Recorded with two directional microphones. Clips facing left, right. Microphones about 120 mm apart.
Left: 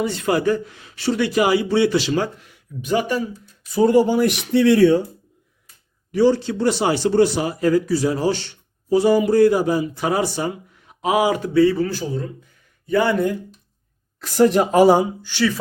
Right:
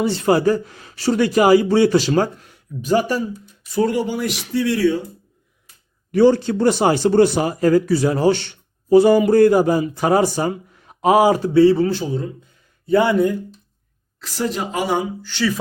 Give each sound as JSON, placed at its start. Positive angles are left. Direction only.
{"t": 0.0, "sound": "a man's voice", "side_deg": -30}
{"t": 4.0, "sound": "speech", "side_deg": 45}
{"t": 6.1, "sound": "speech", "side_deg": -55}
{"t": 14.2, "sound": "speech", "side_deg": 50}